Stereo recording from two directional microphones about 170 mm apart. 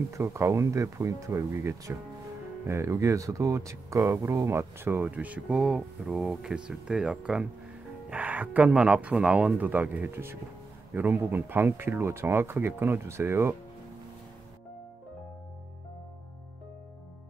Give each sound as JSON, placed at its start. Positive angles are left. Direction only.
{"t": 0.1, "sound": "speech", "side_deg": -15}